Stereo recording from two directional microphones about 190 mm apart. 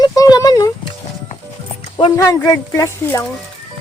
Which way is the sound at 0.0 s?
20° left (ahead or behind).